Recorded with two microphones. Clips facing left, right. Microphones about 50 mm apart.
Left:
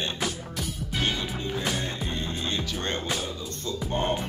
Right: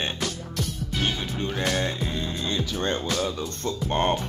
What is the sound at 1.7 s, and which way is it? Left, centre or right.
Music, right.